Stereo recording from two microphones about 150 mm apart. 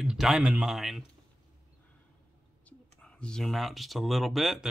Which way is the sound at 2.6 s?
5° left (ahead or behind).